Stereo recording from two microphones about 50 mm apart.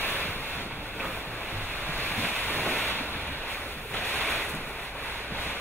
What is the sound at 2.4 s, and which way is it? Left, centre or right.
Ocean, left.